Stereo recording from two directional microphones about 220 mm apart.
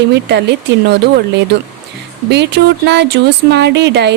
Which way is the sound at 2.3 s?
50° right (ahead or behind).